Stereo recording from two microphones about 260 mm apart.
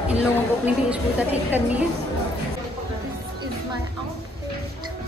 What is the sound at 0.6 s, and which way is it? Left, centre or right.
A woman's voice, centre.